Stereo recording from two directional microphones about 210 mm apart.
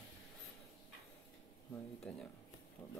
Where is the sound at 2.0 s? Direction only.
5° left (ahead or behind).